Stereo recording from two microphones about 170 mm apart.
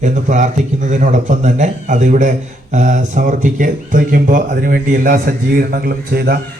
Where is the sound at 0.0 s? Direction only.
45° right (ahead or behind).